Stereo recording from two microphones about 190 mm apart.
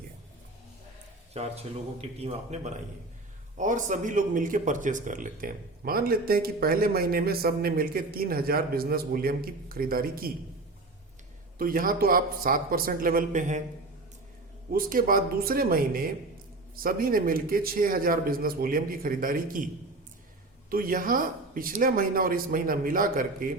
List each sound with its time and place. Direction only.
1.3 s speech: 35° right (ahead or behind); by 10.3 s 50° right (ahead or behind)
11.5 s speech: 50° right (ahead or behind)
14.7 s speech: 50° right (ahead or behind)